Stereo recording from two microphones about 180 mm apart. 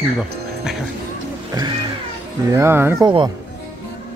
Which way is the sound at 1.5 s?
25° right (ahead or behind).